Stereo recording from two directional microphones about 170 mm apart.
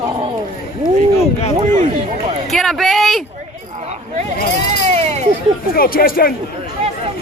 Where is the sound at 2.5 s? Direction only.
Centre (ahead or behind).